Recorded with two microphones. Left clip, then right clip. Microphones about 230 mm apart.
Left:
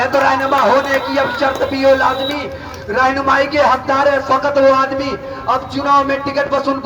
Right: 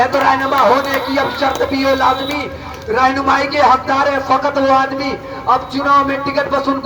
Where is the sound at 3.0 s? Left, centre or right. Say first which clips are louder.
Even; left.